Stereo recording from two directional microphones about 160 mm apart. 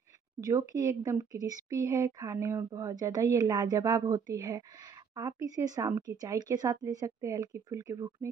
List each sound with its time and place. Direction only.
0.4 s speech: 20° right (ahead or behind)